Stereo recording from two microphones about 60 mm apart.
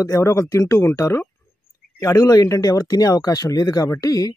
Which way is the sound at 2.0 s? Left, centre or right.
Left.